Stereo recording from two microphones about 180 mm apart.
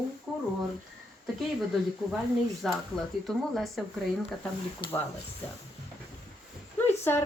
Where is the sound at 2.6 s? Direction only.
Centre (ahead or behind).